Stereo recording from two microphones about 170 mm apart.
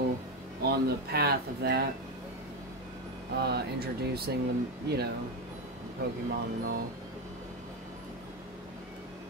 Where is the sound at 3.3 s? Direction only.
75° right (ahead or behind).